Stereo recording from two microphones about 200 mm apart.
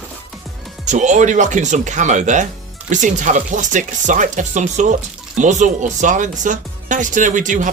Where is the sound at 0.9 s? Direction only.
35° right (ahead or behind).